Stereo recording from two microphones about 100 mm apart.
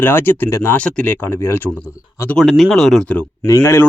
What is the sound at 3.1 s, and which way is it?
Speech, 15° left (ahead or behind).